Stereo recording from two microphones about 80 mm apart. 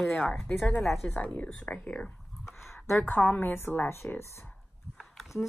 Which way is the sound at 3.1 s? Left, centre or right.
Left.